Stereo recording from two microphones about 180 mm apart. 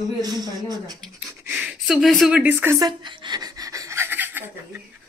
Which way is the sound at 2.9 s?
25° right (ahead or behind).